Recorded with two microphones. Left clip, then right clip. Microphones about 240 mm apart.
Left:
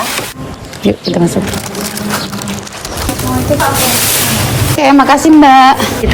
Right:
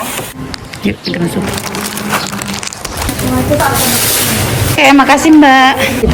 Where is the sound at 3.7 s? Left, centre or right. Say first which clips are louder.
Left 1 dB; centre.